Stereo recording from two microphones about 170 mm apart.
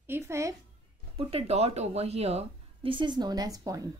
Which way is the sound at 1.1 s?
35° right (ahead or behind).